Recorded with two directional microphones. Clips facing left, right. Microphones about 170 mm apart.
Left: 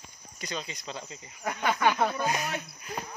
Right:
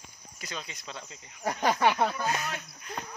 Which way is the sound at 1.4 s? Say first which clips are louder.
Right 1 dB; 35° right (ahead or behind).